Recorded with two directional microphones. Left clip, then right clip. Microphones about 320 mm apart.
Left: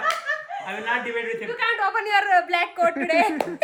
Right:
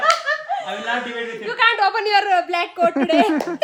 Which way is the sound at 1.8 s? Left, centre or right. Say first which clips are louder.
Right 4 dB; right.